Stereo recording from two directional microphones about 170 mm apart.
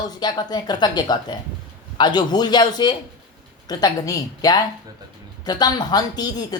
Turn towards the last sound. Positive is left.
turn(degrees=25)  # may be behind; listen again after turning